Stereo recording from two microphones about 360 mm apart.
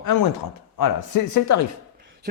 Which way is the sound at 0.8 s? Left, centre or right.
Left.